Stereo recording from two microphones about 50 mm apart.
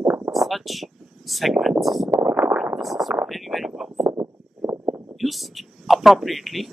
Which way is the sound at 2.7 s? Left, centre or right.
Centre.